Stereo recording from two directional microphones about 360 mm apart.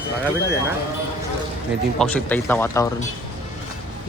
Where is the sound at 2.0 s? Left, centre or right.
Centre.